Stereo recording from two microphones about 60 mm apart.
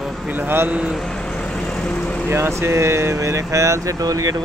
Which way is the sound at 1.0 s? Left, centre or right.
Centre.